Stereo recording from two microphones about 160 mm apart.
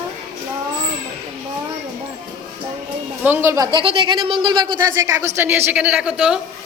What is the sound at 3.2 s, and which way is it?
A woman's voice, 15° right (ahead or behind).